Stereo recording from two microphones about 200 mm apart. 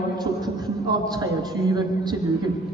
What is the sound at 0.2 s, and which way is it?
A man's voice, 20° right (ahead or behind).